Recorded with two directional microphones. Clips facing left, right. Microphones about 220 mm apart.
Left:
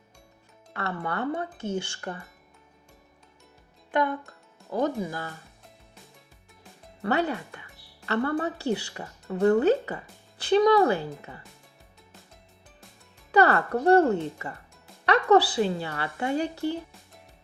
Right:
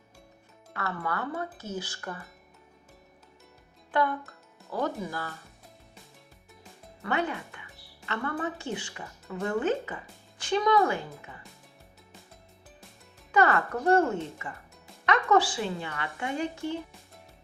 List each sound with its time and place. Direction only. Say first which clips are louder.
0.8 s speech: left 3 dB; 30° left (ahead or behind)
4.7 s speech: left 4 dB; 20° left (ahead or behind)
7.0 s a woman's voice: left 4 dB; 35° left (ahead or behind)
13.3 s a woman's voice: left 3 dB; 35° left (ahead or behind)